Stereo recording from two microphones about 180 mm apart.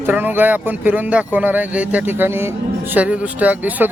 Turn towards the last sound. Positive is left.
turn(degrees=-10)  # may be behind; listen again after turning